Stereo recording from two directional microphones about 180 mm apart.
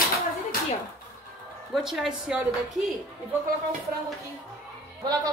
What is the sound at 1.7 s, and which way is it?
A woman's voice, centre (ahead or behind).